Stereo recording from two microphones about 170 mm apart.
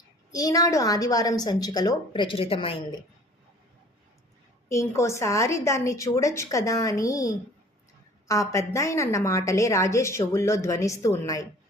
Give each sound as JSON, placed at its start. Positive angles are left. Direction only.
{"t": 0.3, "sound": "a woman's voice", "side_deg": 20}
{"t": 4.7, "sound": "a woman's voice", "side_deg": 15}